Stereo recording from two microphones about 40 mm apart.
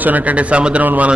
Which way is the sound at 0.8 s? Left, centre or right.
Right.